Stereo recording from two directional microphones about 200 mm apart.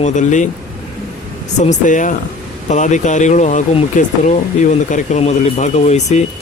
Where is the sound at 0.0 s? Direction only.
40° left (ahead or behind).